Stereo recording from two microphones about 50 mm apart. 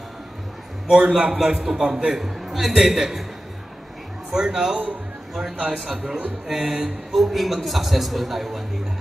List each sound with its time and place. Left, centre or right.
0.8 s a man's voice: right
1.1 s a man's voice: centre
2.1 s a man's voice: centre
4.3 s a man's voice: centre
5.9 s a man's voice: centre
7.2 s a man's voice: centre